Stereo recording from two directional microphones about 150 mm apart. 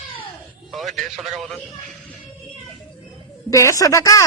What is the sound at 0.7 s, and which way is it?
Speech, centre (ahead or behind).